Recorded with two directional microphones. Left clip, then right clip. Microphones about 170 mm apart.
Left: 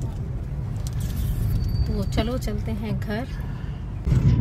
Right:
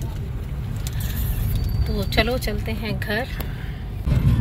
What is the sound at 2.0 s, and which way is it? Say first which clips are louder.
A woman's voice: right 7 dB; 15° left (ahead or behind).